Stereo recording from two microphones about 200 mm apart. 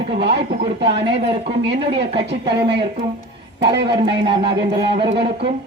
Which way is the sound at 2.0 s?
55° right (ahead or behind).